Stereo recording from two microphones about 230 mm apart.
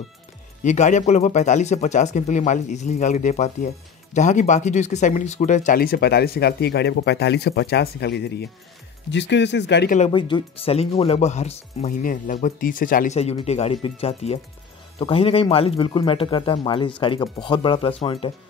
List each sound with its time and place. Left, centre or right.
0.7 s speech: left
9.9 s speech: left